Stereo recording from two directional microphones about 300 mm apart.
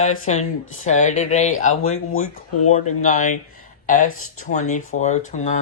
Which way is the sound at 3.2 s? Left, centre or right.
Left.